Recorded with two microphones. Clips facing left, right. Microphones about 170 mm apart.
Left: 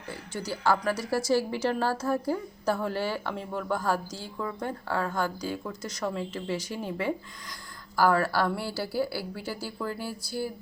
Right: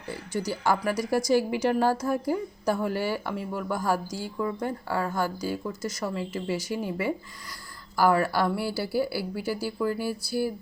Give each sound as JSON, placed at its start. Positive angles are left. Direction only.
{"t": 0.1, "sound": "a woman's voice", "side_deg": -10}